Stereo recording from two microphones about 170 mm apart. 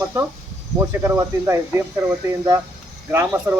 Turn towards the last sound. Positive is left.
turn(degrees=-15)  # may be behind; listen again after turning